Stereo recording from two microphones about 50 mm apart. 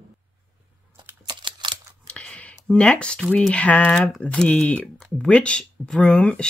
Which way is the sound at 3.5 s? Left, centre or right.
Left.